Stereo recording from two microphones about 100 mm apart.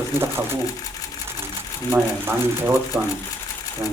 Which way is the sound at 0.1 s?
25° right (ahead or behind).